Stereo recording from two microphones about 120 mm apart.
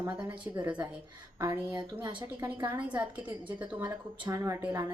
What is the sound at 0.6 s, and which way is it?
Speech, 15° right (ahead or behind).